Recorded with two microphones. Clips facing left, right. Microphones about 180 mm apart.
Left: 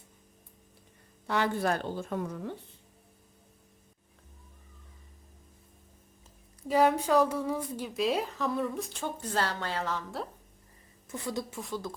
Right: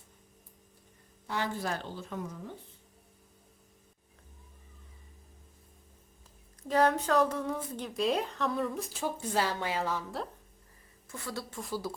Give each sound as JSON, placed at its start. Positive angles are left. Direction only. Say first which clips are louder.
{"t": 1.3, "sound": "a woman's voice", "louder": "left 5 dB", "side_deg": 60}
{"t": 6.7, "sound": "a woman's voice", "louder": "left 2 dB", "side_deg": 10}
{"t": 11.1, "sound": "a woman's voice", "louder": "left 5 dB", "side_deg": 20}
{"t": 11.5, "sound": "a woman's voice", "louder": "even", "side_deg": 0}